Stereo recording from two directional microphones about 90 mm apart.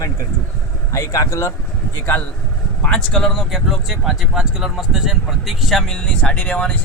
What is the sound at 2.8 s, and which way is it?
Speech, 10° left (ahead or behind).